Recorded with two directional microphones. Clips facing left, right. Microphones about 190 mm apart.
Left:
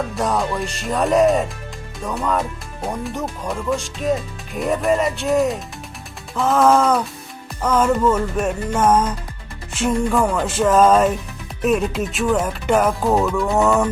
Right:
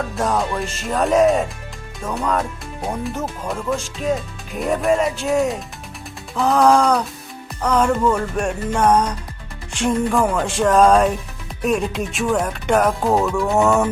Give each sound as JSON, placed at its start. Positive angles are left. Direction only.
{"t": 0.2, "sound": "speech", "side_deg": 0}